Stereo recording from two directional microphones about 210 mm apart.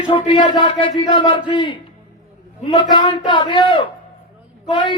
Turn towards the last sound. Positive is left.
turn(degrees=25)  # may be behind; listen again after turning